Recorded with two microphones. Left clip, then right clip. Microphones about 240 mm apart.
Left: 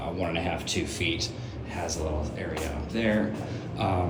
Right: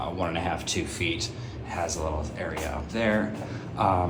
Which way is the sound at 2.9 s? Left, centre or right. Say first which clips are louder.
Right 1 dB; centre.